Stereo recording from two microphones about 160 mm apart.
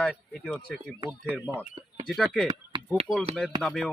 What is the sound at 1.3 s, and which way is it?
Speech, 10° right (ahead or behind).